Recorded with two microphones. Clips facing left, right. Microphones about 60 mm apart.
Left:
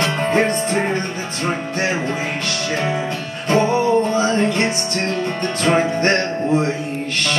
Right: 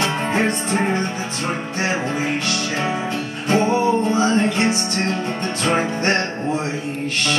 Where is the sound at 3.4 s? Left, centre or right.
Right.